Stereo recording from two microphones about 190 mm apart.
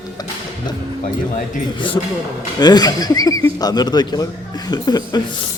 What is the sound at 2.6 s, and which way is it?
Speech, 20° left (ahead or behind).